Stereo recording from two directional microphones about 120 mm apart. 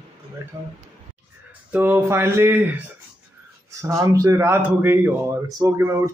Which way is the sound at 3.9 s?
25° right (ahead or behind).